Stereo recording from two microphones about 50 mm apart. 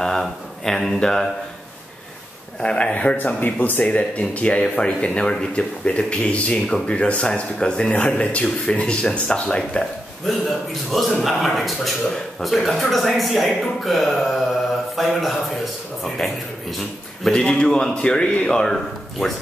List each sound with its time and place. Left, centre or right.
0.0 s speech: centre
2.6 s speech: left
3.3 s speech: left
3.8 s speech: left
10.3 s speech: centre